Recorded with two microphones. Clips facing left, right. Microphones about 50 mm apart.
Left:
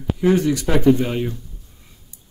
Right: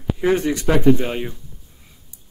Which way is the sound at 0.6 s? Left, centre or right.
Centre.